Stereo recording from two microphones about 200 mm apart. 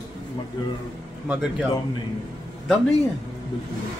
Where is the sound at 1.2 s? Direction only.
5° right (ahead or behind).